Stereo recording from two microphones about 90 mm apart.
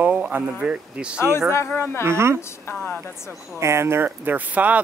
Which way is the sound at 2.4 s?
25° left (ahead or behind).